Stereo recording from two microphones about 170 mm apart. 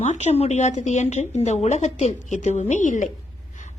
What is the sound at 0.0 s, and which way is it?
A woman's voice, 40° left (ahead or behind).